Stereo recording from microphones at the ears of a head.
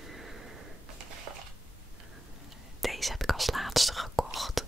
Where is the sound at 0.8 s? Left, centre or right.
Right.